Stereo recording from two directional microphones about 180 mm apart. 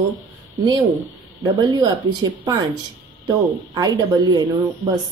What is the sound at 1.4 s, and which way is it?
A woman's voice, 20° right (ahead or behind).